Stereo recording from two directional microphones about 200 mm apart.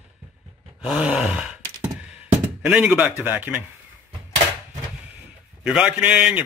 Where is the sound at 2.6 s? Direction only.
10° right (ahead or behind).